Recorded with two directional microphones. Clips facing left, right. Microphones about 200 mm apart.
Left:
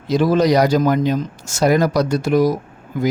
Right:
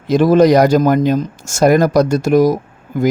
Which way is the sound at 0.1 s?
50° right (ahead or behind).